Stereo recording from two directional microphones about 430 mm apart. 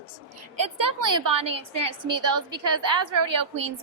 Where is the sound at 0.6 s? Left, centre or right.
Right.